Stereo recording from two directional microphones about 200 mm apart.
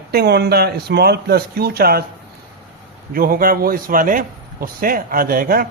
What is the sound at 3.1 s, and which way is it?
A man's voice, 45° right (ahead or behind).